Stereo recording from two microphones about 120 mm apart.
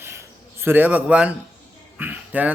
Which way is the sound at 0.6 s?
15° right (ahead or behind).